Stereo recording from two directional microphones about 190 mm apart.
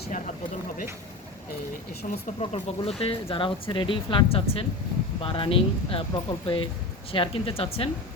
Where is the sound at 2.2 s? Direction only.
35° left (ahead or behind).